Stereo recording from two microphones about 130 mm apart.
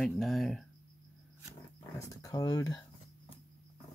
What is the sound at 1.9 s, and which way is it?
Speech, 25° left (ahead or behind).